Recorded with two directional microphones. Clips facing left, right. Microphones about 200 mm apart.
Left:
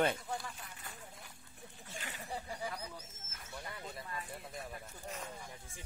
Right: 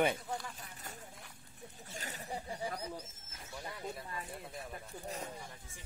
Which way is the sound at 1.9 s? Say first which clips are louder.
Right 1 dB; 40° right (ahead or behind).